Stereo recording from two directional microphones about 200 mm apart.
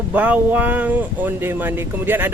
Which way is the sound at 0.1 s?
10° right (ahead or behind).